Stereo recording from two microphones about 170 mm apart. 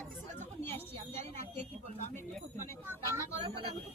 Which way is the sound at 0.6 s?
10° left (ahead or behind).